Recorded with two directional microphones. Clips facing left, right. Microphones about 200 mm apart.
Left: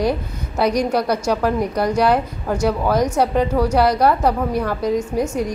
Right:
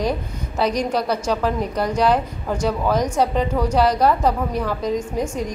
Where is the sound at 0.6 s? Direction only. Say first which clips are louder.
Left 3 dB; 10° left (ahead or behind).